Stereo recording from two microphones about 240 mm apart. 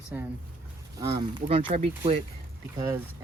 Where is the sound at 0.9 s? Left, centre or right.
Centre.